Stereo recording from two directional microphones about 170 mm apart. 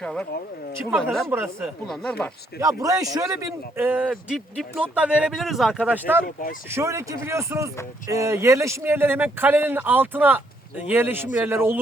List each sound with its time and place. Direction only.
0.0 s speech: 5° left (ahead or behind)
1.3 s a man's voice: 15° right (ahead or behind)
1.9 s speech: 5° left (ahead or behind)
2.6 s a man's voice: 20° right (ahead or behind)
6.2 s speech: 55° left (ahead or behind)
6.7 s a man's voice: 15° right (ahead or behind)